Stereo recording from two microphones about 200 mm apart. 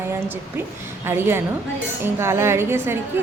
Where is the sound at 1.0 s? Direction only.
10° right (ahead or behind).